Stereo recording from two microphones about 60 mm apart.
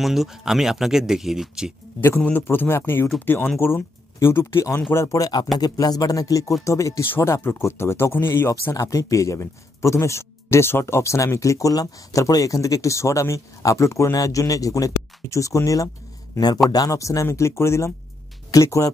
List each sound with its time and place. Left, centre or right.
0.0 s speech: centre
2.0 s speech: left
3.5 s speech: left
4.9 s speech: left
5.6 s speech: left
6.6 s speech: left
8.7 s speech: left
14.1 s speech: left
16.7 s speech: left
18.5 s speech: left